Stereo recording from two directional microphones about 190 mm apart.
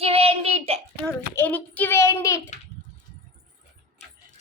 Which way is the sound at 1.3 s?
10° left (ahead or behind).